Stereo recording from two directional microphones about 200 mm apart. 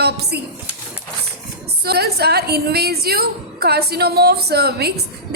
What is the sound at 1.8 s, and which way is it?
A woman's voice, 50° right (ahead or behind).